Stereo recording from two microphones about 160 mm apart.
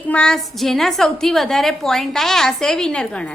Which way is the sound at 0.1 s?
5° left (ahead or behind).